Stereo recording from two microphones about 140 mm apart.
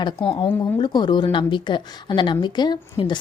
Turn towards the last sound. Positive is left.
turn(degrees=35)  # may be behind; listen again after turning